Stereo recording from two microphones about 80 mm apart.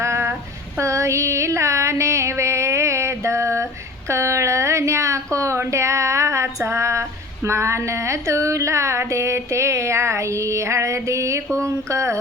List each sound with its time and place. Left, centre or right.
0.0 s child singing: right
0.8 s a sound: right
11.5 s speech: right